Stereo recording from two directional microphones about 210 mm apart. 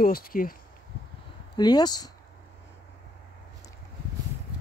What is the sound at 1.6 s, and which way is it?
Speech, 20° left (ahead or behind).